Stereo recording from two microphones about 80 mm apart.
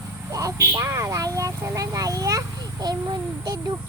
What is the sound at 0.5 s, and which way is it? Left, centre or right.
Speech, right.